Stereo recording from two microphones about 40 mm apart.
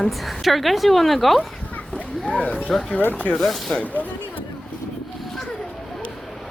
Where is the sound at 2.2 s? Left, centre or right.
Left.